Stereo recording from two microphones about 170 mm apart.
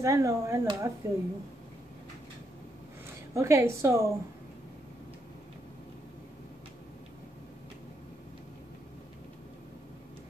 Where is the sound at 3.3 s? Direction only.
15° right (ahead or behind).